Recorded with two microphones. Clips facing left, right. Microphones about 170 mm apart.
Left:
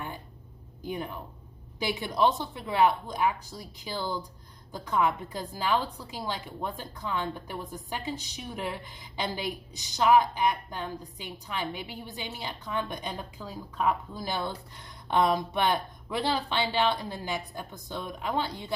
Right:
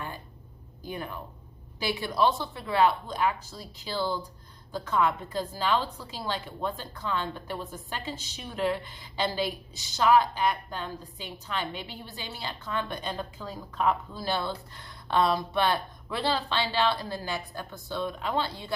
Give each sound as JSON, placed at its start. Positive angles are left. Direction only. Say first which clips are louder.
{"t": 0.8, "sound": "a woman's voice", "louder": "left 2 dB", "side_deg": 20}